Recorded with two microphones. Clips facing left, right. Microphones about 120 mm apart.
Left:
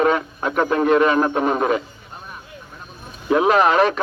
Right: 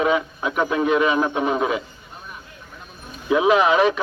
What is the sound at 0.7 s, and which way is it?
Speech, 45° left (ahead or behind).